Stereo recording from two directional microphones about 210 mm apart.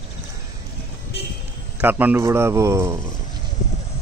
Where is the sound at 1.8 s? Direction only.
10° right (ahead or behind).